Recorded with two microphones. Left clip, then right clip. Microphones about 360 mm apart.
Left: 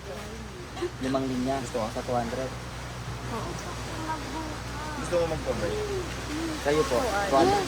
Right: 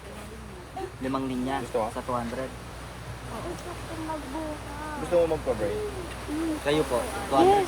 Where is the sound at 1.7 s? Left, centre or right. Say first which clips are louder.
Right 6 dB; centre.